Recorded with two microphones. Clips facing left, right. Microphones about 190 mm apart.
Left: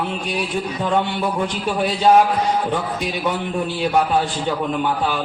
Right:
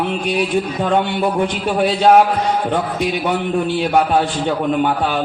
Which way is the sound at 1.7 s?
60° right (ahead or behind).